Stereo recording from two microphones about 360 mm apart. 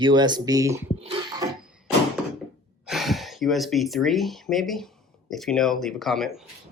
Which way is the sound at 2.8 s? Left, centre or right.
Centre.